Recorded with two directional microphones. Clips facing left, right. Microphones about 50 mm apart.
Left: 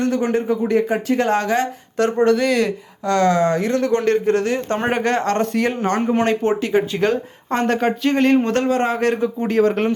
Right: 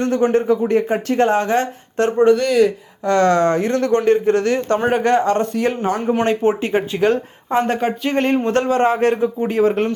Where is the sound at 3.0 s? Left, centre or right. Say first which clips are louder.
Right 2 dB; right.